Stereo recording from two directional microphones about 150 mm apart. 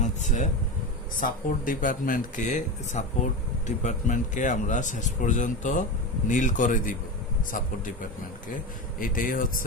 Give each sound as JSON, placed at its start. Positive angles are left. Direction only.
{"t": 0.0, "sound": "speech", "side_deg": 55}
{"t": 1.2, "sound": "a man's voice", "side_deg": 65}
{"t": 9.0, "sound": "speech", "side_deg": 65}